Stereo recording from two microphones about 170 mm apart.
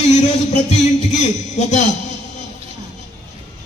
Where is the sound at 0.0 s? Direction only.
45° left (ahead or behind).